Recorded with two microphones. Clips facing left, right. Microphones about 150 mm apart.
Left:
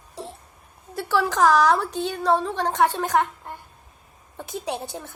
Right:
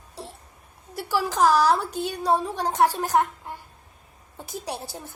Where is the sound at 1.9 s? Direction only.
10° right (ahead or behind).